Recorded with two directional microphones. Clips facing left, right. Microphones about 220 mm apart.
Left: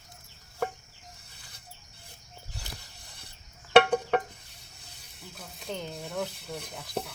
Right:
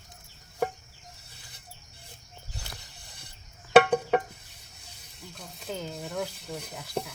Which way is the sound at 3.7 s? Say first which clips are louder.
Right 1 dB; 10° right (ahead or behind).